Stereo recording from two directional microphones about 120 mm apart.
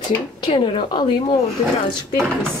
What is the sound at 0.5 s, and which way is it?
Speech, 45° left (ahead or behind).